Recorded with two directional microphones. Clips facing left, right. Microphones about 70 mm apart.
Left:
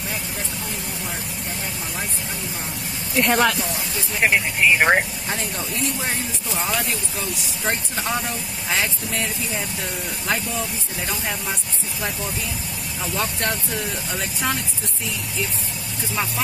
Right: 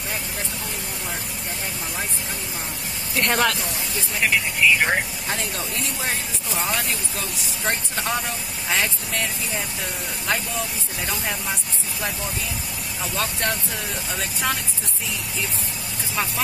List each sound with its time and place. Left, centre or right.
3.2 s speech: centre
4.2 s speech: left
5.3 s speech: centre
11.1 s speech: centre
13.0 s speech: centre